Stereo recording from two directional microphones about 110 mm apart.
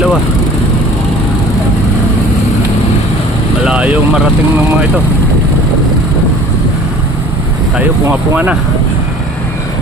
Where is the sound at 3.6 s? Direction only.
10° right (ahead or behind).